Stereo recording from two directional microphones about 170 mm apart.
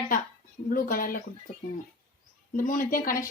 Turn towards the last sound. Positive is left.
turn(degrees=55)  # may be behind; listen again after turning